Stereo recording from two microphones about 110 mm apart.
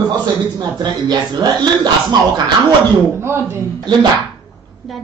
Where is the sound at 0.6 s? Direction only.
40° right (ahead or behind).